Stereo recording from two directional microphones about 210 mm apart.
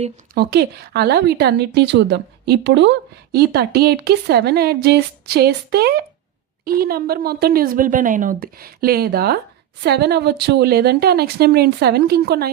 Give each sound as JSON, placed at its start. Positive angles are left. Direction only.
{"t": 0.3, "sound": "speech", "side_deg": -50}